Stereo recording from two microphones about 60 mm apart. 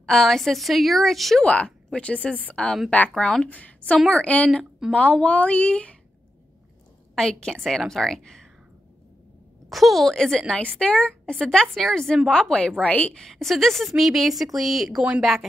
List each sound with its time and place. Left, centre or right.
0.0 s a woman's voice: centre
1.4 s a woman's voice: left
3.4 s a woman's voice: left
7.2 s a woman's voice: centre
9.7 s a woman's voice: centre
12.3 s a woman's voice: centre
13.2 s a woman's voice: centre